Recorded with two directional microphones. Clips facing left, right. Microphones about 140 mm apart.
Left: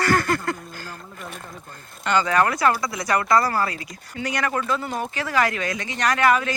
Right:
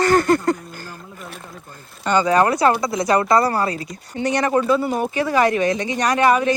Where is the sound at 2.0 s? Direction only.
20° right (ahead or behind).